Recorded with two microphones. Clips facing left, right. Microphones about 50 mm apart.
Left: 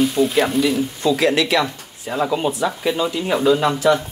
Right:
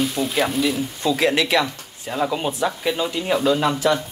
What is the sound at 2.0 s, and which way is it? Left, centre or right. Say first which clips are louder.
Speech: left 3 dB; centre.